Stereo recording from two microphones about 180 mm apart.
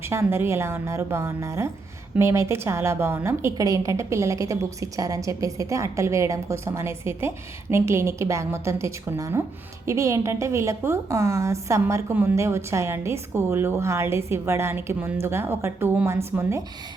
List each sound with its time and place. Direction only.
0.0 s a woman's voice: 15° right (ahead or behind)